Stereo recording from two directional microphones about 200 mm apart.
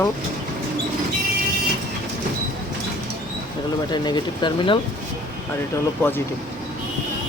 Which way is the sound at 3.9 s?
20° left (ahead or behind).